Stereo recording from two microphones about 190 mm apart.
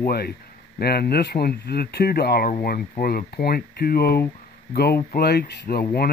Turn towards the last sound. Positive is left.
turn(degrees=60)  # may be behind; listen again after turning